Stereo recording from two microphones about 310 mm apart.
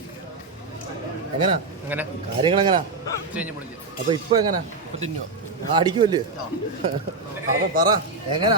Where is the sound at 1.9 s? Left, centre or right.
Centre.